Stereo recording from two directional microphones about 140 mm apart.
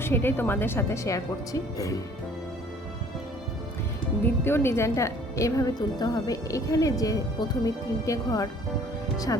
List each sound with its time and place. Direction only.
0.0 s speech: 15° left (ahead or behind)
4.4 s a woman's voice: 15° left (ahead or behind)